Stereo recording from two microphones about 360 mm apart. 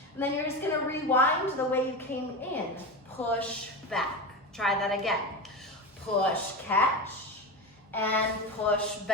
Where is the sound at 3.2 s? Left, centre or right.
Centre.